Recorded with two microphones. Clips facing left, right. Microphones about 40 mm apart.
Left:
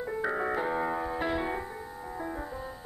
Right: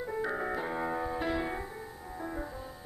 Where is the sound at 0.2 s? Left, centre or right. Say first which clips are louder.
Left 4 dB; centre.